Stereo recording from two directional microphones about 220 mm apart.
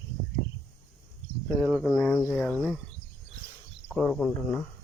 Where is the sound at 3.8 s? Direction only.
Centre (ahead or behind).